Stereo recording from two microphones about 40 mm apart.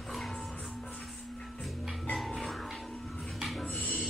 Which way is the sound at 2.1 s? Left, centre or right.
Centre.